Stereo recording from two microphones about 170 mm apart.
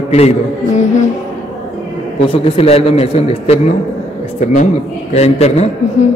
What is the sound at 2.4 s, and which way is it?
A man's voice, 35° left (ahead or behind).